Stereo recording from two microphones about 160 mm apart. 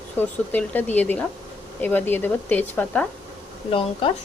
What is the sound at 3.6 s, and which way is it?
Speech, 35° left (ahead or behind).